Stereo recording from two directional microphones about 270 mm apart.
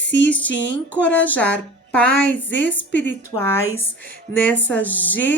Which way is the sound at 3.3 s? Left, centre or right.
Centre.